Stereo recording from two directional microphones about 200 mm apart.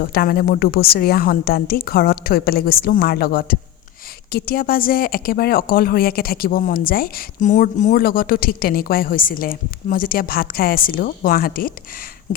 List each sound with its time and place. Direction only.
0.0 s speech: 50° left (ahead or behind)